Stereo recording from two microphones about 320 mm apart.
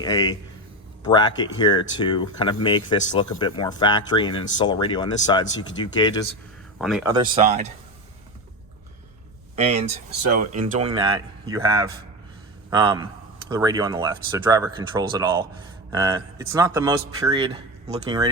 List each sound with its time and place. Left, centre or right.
0.0 s speech: centre
6.7 s speech: centre
7.1 s speech: right
9.6 s speech: centre